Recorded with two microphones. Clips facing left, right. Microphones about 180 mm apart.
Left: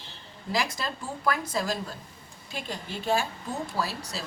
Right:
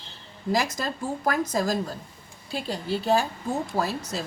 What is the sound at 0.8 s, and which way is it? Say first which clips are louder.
Speech: right 5 dB; 45° right (ahead or behind).